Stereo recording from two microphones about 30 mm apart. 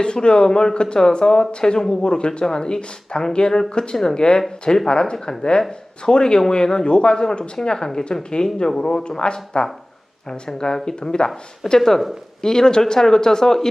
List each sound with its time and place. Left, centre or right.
0.0 s speech: left
11.8 s speech: centre
12.4 s speech: left